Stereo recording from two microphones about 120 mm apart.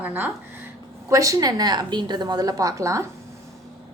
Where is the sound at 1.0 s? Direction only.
25° right (ahead or behind).